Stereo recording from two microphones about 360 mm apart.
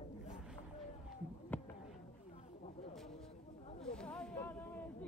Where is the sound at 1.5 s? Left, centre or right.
Centre.